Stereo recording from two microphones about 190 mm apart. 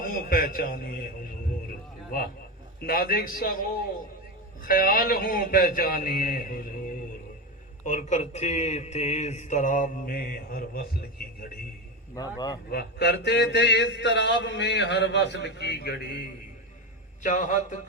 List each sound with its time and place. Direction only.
0.0 s a man's voice: 50° left (ahead or behind)
2.8 s a man's voice: 50° left (ahead or behind)
7.9 s a man's voice: 40° left (ahead or behind)
12.7 s a man's voice: 60° left (ahead or behind)
17.2 s a man's voice: 40° left (ahead or behind)